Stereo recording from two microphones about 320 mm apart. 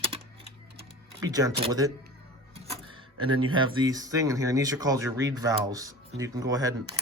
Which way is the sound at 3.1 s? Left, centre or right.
Right.